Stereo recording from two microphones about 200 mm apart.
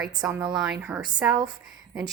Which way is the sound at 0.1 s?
15° right (ahead or behind).